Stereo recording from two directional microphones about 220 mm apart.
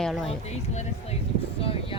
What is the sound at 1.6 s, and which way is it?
Speech, 25° left (ahead or behind).